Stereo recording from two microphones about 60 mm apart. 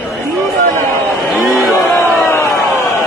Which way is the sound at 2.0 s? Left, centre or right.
Left.